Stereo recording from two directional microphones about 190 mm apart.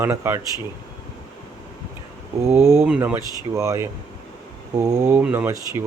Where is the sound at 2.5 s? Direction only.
15° right (ahead or behind).